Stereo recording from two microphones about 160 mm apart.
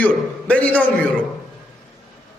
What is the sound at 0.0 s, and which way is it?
Speech, 10° left (ahead or behind).